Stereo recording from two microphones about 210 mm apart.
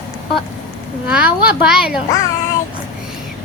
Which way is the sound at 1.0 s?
5° right (ahead or behind).